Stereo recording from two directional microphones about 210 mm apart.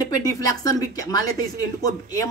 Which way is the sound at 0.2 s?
15° left (ahead or behind).